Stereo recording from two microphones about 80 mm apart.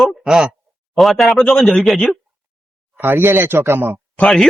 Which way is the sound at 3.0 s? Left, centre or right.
Right.